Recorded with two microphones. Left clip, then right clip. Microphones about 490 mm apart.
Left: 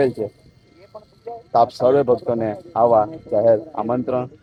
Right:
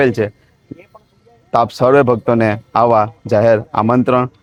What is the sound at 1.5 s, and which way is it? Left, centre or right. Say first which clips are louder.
Speech: right 4 dB; right.